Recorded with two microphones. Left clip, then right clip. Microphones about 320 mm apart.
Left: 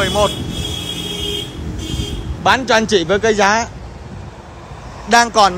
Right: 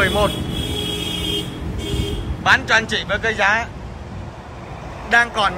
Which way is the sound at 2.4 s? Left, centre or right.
Centre.